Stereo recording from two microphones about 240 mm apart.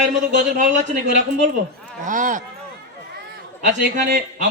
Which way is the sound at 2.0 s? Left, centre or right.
Right.